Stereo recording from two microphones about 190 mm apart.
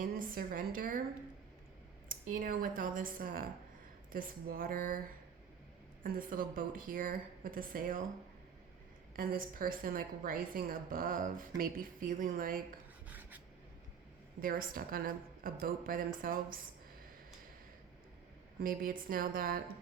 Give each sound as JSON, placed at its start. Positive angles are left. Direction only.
{"t": 0.0, "sound": "a woman's voice", "side_deg": -45}
{"t": 2.0, "sound": "a woman's voice", "side_deg": -50}
{"t": 9.1, "sound": "a woman's voice", "side_deg": -50}
{"t": 13.1, "sound": "filing", "side_deg": -10}
{"t": 14.4, "sound": "a woman's voice", "side_deg": -50}
{"t": 18.6, "sound": "a woman's voice", "side_deg": -50}